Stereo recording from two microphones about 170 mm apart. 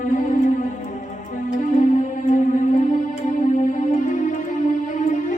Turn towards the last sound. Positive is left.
turn(degrees=45)  # may be behind; listen again after turning